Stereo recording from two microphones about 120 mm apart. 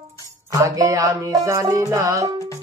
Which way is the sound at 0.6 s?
30° right (ahead or behind).